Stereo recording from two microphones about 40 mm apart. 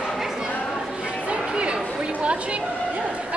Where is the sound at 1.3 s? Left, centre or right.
Right.